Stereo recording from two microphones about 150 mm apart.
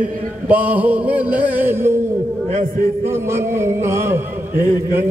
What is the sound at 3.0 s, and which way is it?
A man's voice, 15° right (ahead or behind).